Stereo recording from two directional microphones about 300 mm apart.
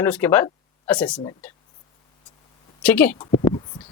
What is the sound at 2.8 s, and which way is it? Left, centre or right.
Speech, centre.